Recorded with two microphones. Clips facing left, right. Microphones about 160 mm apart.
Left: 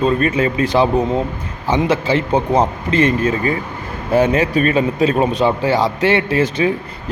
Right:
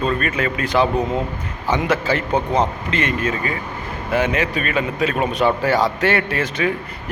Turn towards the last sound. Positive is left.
turn(degrees=25)  # may be behind; listen again after turning